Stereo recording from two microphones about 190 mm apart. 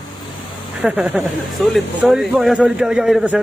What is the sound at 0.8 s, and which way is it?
Speech, 5° right (ahead or behind).